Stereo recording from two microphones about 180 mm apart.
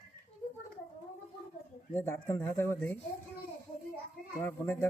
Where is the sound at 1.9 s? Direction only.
15° left (ahead or behind).